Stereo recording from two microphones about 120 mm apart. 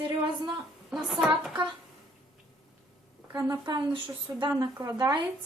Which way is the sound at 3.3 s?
35° right (ahead or behind).